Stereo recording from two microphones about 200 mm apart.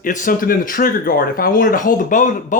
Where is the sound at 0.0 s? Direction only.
40° left (ahead or behind).